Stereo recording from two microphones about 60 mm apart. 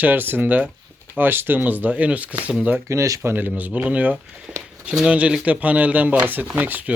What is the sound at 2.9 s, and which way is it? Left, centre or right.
Speech, right.